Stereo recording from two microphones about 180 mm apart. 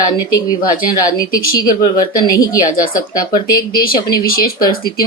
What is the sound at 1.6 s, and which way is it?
Speech, 20° left (ahead or behind).